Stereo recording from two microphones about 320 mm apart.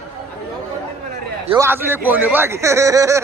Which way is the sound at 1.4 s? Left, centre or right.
Centre.